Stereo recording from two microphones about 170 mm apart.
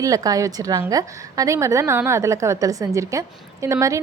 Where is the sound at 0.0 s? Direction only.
20° right (ahead or behind).